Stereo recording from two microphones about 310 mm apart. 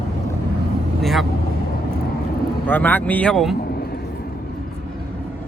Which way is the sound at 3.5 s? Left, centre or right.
Left.